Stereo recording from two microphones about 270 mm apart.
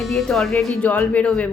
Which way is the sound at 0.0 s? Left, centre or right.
Centre.